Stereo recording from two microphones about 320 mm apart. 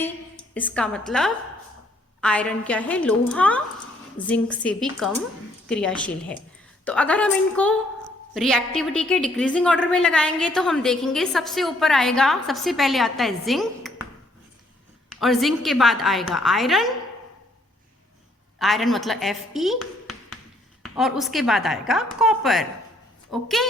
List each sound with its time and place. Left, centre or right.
0.5 s a woman's voice: centre
15.1 s a woman's voice: centre
18.6 s a woman's voice: centre